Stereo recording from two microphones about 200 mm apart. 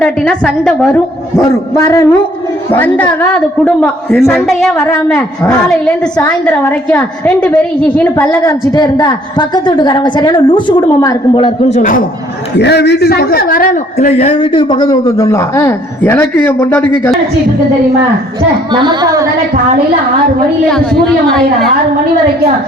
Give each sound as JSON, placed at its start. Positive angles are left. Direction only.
{"t": 0.0, "sound": "a woman's voice", "side_deg": 5}
{"t": 1.7, "sound": "a woman's voice", "side_deg": 15}
{"t": 11.8, "sound": "speech", "side_deg": 40}
{"t": 12.5, "sound": "a man's voice", "side_deg": 55}
{"t": 18.7, "sound": "a woman's voice", "side_deg": -20}